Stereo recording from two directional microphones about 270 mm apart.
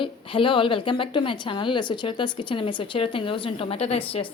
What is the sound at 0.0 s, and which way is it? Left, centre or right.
A woman's voice, centre.